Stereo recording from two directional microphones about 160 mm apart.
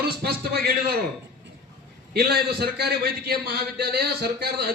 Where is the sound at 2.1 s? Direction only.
80° right.